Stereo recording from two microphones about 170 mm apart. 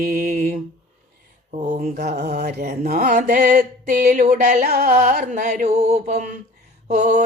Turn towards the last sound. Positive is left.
turn(degrees=-45)  # may be behind; listen again after turning